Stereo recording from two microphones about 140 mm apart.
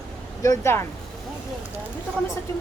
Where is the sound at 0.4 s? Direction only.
20° left (ahead or behind).